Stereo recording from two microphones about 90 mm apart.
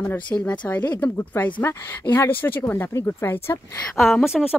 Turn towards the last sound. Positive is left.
turn(degrees=-5)  # may be behind; listen again after turning